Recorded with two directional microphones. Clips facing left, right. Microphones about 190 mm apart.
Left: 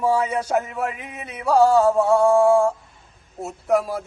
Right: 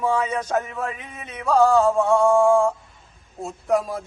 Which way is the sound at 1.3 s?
10° left (ahead or behind).